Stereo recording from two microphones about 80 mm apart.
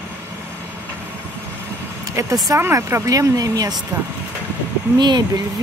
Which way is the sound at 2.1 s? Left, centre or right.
Right.